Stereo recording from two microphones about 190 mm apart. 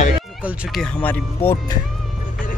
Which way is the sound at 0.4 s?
5° right (ahead or behind).